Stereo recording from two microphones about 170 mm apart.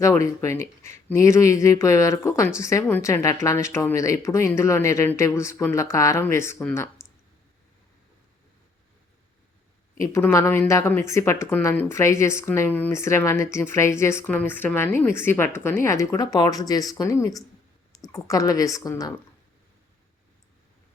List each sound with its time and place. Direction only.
0.0 s a woman's voice: 15° left (ahead or behind)
10.0 s a woman's voice: 15° left (ahead or behind)